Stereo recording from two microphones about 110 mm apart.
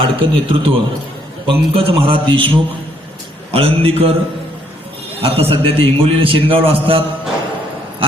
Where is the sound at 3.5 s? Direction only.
60° right (ahead or behind).